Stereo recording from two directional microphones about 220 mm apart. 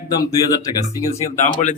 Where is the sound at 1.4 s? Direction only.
35° left (ahead or behind).